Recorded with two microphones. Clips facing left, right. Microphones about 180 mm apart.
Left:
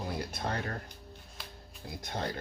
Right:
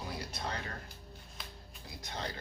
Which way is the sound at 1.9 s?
55° left (ahead or behind).